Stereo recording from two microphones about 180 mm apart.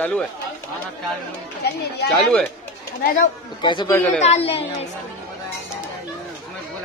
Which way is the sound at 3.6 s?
25° left (ahead or behind).